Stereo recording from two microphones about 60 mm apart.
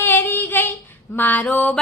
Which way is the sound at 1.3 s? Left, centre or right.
Left.